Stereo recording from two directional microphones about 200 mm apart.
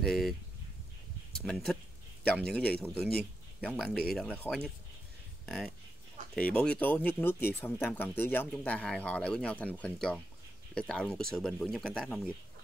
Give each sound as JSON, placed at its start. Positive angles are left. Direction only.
{"t": 0.0, "sound": "speech", "side_deg": 0}
{"t": 1.4, "sound": "speech", "side_deg": 0}
{"t": 6.3, "sound": "speech", "side_deg": 5}